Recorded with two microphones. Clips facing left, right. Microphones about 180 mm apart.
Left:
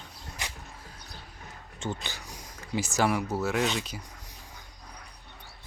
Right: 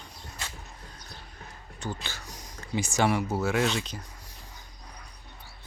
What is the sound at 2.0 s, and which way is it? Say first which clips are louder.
Speech: even; 15° left (ahead or behind).